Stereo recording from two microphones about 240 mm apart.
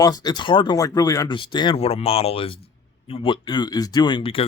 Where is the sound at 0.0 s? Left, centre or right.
Centre.